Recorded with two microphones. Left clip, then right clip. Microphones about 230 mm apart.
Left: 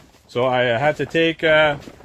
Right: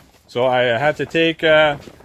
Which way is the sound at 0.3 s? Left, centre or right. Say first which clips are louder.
Right 2 dB; right.